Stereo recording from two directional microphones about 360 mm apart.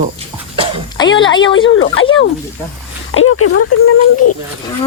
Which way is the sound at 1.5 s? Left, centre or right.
Left.